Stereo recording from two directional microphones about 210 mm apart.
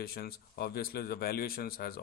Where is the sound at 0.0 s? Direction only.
45° left (ahead or behind).